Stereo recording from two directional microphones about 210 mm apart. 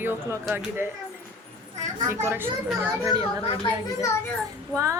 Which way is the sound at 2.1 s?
10° right (ahead or behind).